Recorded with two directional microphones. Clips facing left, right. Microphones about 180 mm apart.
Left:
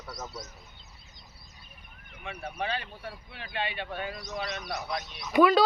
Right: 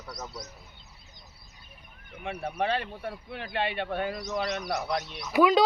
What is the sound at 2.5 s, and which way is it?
Speech, 60° right (ahead or behind).